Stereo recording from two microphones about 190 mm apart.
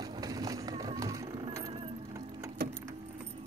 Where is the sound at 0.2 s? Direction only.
20° right (ahead or behind).